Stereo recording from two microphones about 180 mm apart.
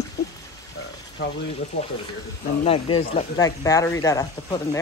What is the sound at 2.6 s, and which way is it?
Speech, 30° left (ahead or behind).